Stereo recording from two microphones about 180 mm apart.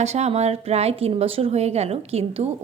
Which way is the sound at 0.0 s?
35° right (ahead or behind).